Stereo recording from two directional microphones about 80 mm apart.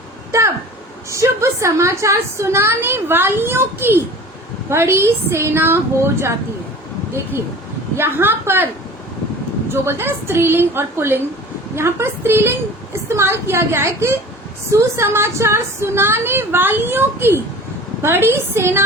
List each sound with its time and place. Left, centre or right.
0.3 s a sound: right
1.1 s a woman's voice: right
7.9 s a woman's voice: right
9.7 s a woman's voice: right